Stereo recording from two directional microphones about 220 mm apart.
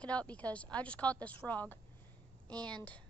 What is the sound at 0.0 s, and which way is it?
A woman's voice, 5° left (ahead or behind).